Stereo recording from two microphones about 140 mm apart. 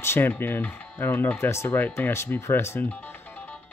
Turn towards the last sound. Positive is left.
turn(degrees=10)  # may be behind; listen again after turning